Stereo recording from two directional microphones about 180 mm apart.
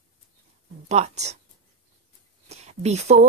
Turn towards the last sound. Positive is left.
turn(degrees=-35)  # may be behind; listen again after turning